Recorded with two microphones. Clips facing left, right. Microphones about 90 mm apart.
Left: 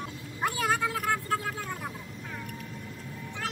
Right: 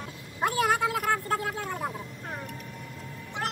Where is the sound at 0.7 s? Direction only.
20° right (ahead or behind).